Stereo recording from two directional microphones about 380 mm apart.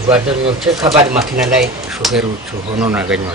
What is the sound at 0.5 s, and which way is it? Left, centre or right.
Speech, centre.